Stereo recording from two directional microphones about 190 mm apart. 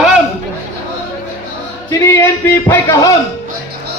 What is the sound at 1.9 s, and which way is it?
Speech, 15° left (ahead or behind).